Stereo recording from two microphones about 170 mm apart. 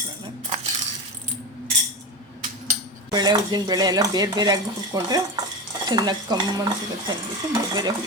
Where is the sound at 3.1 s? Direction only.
25° right (ahead or behind).